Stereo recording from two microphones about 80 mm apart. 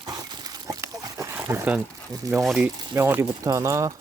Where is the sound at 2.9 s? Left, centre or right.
Right.